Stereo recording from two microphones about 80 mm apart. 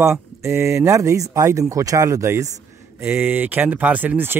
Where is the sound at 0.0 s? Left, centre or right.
Right.